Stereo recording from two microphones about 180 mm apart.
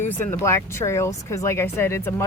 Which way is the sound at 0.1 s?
10° left (ahead or behind).